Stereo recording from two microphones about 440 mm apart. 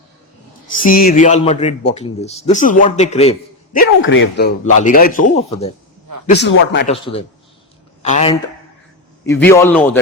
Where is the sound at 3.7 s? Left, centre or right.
Left.